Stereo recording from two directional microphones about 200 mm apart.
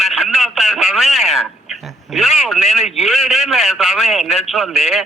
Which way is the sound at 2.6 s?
30° left (ahead or behind).